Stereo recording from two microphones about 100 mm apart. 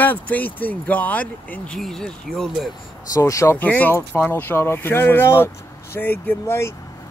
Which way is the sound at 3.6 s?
15° left (ahead or behind).